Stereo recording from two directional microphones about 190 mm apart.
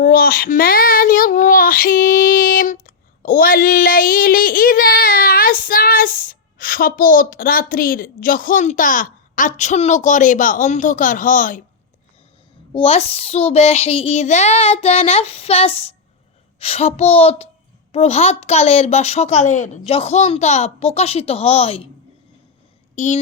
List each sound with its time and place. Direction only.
0.0 s speech: 50° left (ahead or behind)
12.7 s a woman's voice: 30° left (ahead or behind)
23.0 s a woman's voice: 40° left (ahead or behind)